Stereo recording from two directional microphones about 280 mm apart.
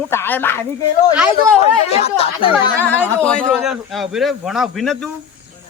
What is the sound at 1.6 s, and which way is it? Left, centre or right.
Speech, left.